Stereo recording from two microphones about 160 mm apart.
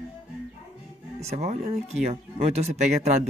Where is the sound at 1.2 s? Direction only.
40° right (ahead or behind).